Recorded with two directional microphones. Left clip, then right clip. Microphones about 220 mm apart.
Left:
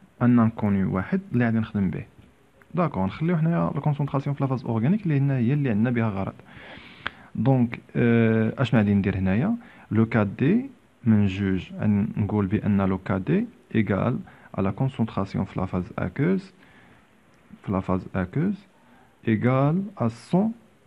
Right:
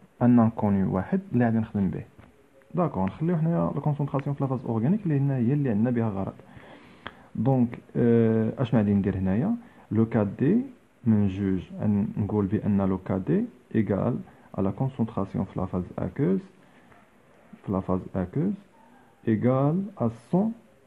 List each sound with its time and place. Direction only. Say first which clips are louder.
0.2 s a man's voice: even; 5° left (ahead or behind); by 16.4 s 20° left (ahead or behind)
17.6 s speech: left 1 dB; 20° left (ahead or behind)